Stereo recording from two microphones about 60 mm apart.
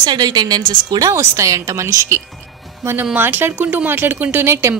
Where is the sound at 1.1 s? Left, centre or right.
Right.